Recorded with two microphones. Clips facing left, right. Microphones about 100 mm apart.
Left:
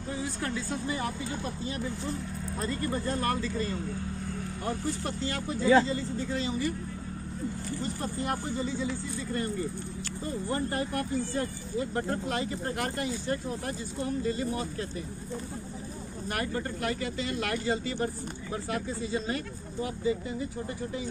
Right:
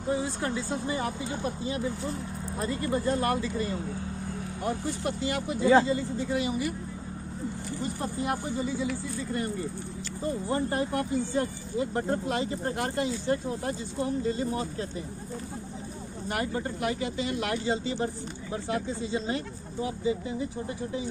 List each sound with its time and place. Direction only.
0.1 s speech: 25° right (ahead or behind)
7.8 s speech: 15° right (ahead or behind)
10.2 s speech: 20° right (ahead or behind)
16.3 s speech: 20° right (ahead or behind)